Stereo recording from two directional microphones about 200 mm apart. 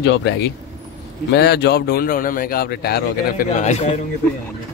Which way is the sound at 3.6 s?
35° left (ahead or behind).